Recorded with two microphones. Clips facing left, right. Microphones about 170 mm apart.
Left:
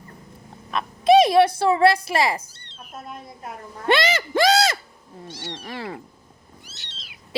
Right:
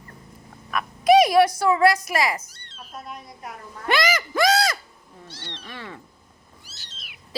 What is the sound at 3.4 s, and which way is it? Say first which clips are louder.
Speech: left 6 dB; 25° left (ahead or behind).